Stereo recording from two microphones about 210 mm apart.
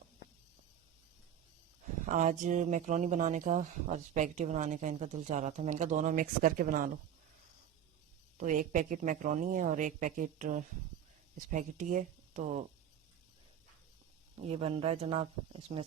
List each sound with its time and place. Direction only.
2.0 s speech: 35° right (ahead or behind)
8.4 s speech: 40° right (ahead or behind)
14.3 s speech: 30° right (ahead or behind)